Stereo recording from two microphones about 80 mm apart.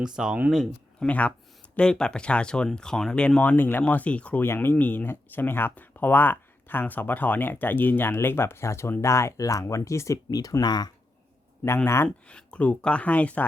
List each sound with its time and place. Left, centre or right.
0.2 s speech: centre
0.9 s speech: centre
4.4 s speech: left
10.2 s speech: left
12.0 s speech: centre